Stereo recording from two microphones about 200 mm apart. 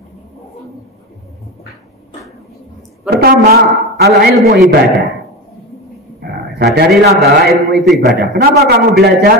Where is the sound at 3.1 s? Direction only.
50° right (ahead or behind).